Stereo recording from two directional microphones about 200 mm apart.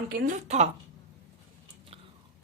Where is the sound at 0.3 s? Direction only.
35° right (ahead or behind).